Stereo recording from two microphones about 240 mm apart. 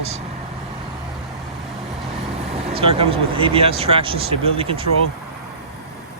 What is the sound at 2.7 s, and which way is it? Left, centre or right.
Speech, right.